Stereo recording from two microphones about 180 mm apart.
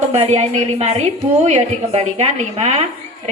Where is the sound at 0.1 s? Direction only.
40° right (ahead or behind).